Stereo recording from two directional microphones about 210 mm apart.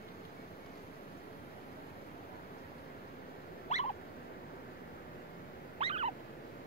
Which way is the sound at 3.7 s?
35° left (ahead or behind).